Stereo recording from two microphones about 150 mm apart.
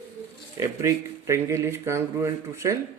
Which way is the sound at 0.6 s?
20° right (ahead or behind).